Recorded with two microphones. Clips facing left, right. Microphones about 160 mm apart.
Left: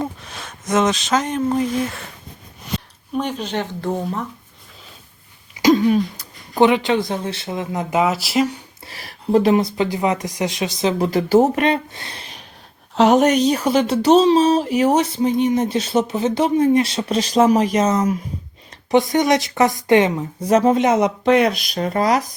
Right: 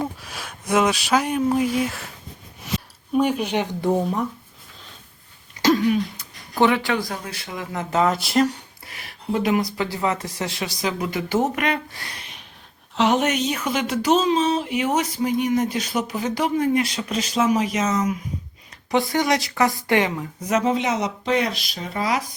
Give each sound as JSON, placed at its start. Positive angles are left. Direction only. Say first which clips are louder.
{"t": 0.0, "sound": "speech", "louder": "left 2 dB", "side_deg": -5}
{"t": 5.6, "sound": "a sound", "louder": "left 4 dB", "side_deg": 10}
{"t": 6.5, "sound": "speech", "louder": "left 4 dB", "side_deg": 20}
{"t": 8.8, "sound": "speech", "louder": "left 3 dB", "side_deg": 35}
{"t": 12.9, "sound": "speech", "louder": "left 6 dB", "side_deg": 40}
{"t": 19.1, "sound": "speech", "louder": "left 5 dB", "side_deg": 20}